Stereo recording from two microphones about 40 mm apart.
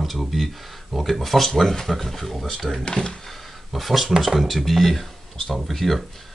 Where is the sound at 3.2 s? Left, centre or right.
Centre.